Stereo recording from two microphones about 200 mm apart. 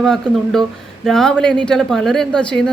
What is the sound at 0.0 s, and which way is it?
A woman's voice, 5° left (ahead or behind).